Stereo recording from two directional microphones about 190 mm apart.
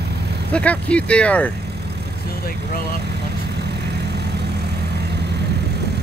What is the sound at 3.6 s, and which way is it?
Vehicle, 60° right (ahead or behind).